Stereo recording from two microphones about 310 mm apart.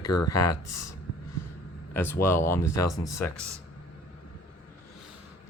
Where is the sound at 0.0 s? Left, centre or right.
Left.